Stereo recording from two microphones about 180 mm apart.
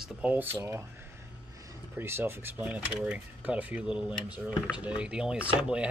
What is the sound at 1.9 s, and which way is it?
Speech, 10° right (ahead or behind).